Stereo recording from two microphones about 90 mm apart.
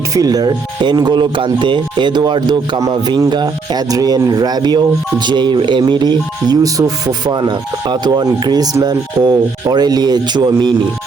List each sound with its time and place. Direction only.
0.1 s speech: 45° right (ahead or behind)
2.8 s a man's voice: 40° right (ahead or behind)